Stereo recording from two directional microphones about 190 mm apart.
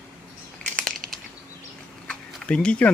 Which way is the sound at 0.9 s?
50° right (ahead or behind).